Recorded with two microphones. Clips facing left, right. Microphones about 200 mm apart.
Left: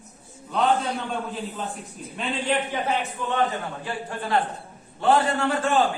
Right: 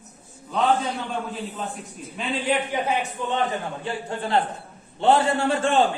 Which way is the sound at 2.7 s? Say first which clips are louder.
Right 1 dB; 15° right (ahead or behind).